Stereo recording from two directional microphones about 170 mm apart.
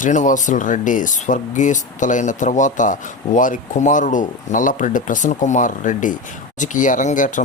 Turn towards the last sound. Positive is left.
turn(degrees=50)  # may be behind; listen again after turning